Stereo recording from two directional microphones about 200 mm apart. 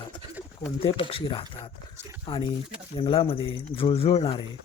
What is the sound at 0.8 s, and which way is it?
Speech, 30° left (ahead or behind).